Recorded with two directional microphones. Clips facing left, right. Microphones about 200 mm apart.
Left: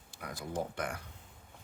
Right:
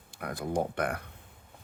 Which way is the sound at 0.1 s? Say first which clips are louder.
Right 7 dB; 55° right (ahead or behind).